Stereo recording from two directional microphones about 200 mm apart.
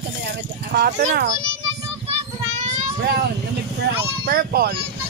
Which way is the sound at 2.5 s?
35° right (ahead or behind).